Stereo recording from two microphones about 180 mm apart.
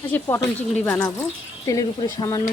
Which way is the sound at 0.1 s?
15° left (ahead or behind).